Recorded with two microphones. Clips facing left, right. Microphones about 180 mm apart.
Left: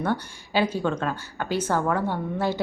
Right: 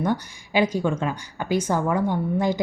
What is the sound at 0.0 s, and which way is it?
A woman's voice, 15° right (ahead or behind).